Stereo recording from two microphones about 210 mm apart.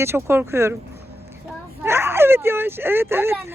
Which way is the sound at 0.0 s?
10° right (ahead or behind).